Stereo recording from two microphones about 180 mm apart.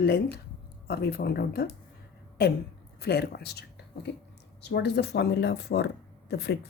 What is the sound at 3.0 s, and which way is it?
Speech, 65° left (ahead or behind).